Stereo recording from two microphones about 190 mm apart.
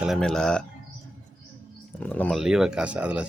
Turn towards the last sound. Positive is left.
turn(degrees=-5)  # may be behind; listen again after turning